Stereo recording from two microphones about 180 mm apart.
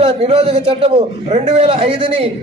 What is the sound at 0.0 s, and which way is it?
A man's voice, 35° right (ahead or behind).